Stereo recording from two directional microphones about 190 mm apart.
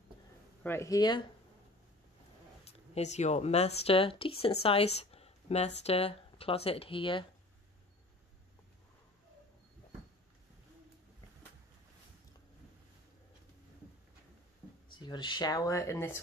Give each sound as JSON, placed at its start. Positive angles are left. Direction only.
{"t": 0.7, "sound": "speech", "side_deg": 15}
{"t": 2.6, "sound": "a woman's voice", "side_deg": 35}
{"t": 15.0, "sound": "speech", "side_deg": 25}